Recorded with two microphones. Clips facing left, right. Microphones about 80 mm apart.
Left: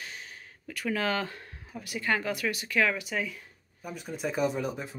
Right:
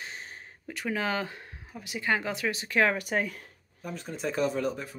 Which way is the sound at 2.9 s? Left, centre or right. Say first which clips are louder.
Right 3 dB; right.